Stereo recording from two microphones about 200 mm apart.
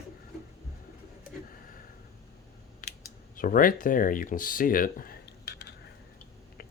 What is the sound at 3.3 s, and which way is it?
Speech, 45° left (ahead or behind).